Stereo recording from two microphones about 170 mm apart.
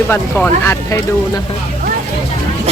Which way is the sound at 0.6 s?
15° left (ahead or behind).